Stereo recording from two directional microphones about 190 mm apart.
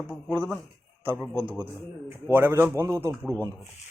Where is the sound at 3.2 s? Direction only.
10° left (ahead or behind).